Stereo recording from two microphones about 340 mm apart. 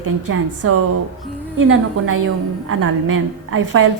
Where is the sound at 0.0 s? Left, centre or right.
Right.